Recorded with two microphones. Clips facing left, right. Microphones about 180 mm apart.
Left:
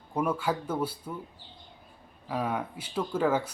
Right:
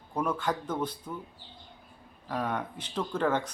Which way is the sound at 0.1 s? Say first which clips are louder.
Left 2 dB; 10° left (ahead or behind).